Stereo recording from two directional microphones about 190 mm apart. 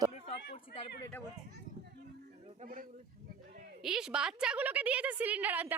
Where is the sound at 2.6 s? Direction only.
45° right (ahead or behind).